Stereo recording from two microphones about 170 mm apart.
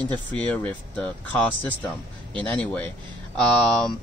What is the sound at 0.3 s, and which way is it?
Speech, 10° left (ahead or behind).